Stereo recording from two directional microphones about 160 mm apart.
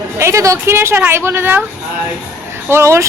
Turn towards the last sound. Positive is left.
turn(degrees=-15)  # may be behind; listen again after turning